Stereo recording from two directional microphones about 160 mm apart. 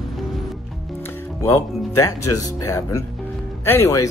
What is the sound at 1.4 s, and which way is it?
Speech, 15° left (ahead or behind).